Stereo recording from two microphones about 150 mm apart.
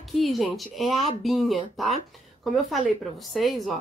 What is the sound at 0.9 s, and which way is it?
Speech, 45° left (ahead or behind).